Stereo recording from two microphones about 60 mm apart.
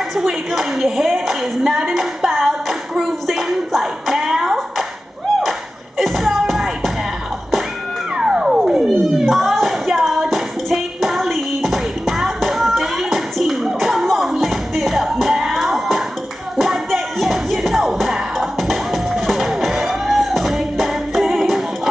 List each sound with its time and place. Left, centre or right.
0.5 s a woman's voice: centre
2.9 s clapping: centre
5.9 s music: centre
8.2 s music: centre